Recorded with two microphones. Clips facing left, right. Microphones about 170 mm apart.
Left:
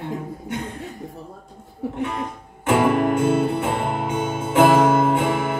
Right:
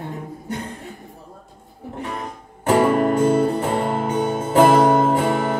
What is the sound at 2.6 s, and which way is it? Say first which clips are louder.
Music: right 2 dB; 40° right (ahead or behind).